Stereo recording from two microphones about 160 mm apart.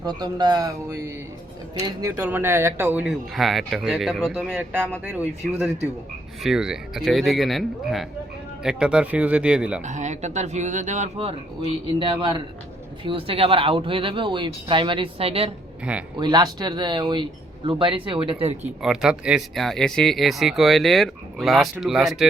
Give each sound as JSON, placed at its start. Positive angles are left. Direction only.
{"t": 0.0, "sound": "speech", "side_deg": -25}
{"t": 9.8, "sound": "speech", "side_deg": -50}
{"t": 11.9, "sound": "speech", "side_deg": -30}
{"t": 15.8, "sound": "speech", "side_deg": -5}
{"t": 16.1, "sound": "speech", "side_deg": -25}
{"t": 18.6, "sound": "speech", "side_deg": -5}